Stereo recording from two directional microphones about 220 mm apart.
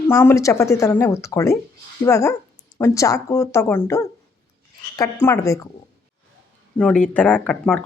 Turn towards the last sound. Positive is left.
turn(degrees=5)  # may be behind; listen again after turning